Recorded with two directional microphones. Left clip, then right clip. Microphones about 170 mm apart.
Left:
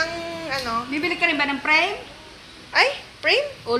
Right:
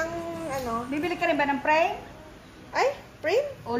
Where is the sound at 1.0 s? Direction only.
55° right (ahead or behind).